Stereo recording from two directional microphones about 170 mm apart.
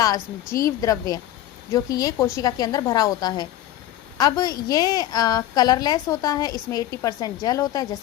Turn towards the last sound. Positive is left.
turn(degrees=20)  # may be behind; listen again after turning